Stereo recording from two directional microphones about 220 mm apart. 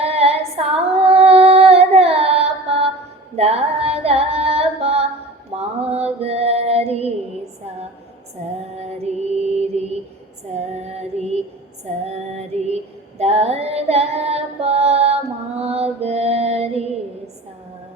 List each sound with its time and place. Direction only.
0.0 s female singing: 30° right (ahead or behind)
3.3 s singing: 30° right (ahead or behind)
5.5 s mantra: 30° right (ahead or behind)
9.6 s mantra: 30° right (ahead or behind)
10.6 s female singing: 30° right (ahead or behind)